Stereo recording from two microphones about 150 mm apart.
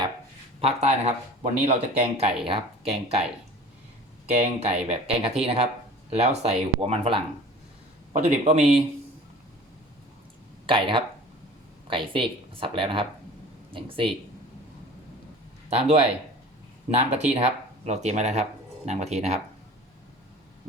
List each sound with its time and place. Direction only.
0.6 s speech: 45° right (ahead or behind)
4.3 s speech: 45° right (ahead or behind)
10.7 s speech: 35° right (ahead or behind)
15.7 s speech: 45° right (ahead or behind)